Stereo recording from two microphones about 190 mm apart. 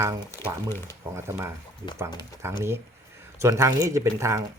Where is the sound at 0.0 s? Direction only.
15° right (ahead or behind).